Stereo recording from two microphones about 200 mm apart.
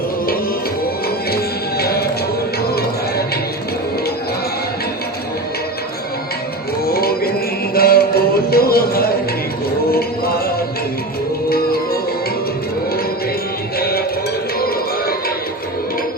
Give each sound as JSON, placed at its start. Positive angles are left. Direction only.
{"t": 1.8, "sound": "music", "side_deg": 50}
{"t": 6.8, "sound": "a sound", "side_deg": 50}
{"t": 7.7, "sound": "music", "side_deg": 50}
{"t": 11.4, "sound": "music", "side_deg": 50}
{"t": 13.7, "sound": "music", "side_deg": 50}